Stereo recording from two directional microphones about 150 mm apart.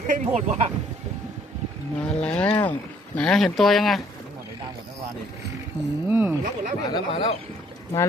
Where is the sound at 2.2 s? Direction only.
10° left (ahead or behind).